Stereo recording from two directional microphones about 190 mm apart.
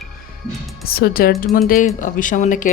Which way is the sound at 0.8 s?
50° left (ahead or behind).